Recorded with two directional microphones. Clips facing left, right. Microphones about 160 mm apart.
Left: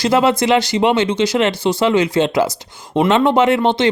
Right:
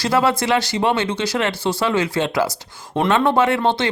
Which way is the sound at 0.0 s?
20° left (ahead or behind).